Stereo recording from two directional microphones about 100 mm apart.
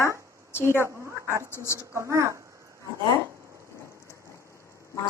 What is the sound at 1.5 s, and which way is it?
Speech, 25° left (ahead or behind).